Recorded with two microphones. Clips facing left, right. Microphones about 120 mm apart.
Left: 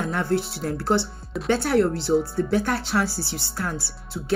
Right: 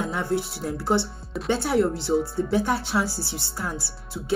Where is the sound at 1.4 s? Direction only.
20° right (ahead or behind).